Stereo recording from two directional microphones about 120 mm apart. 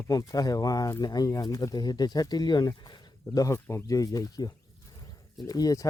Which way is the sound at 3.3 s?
25° left (ahead or behind).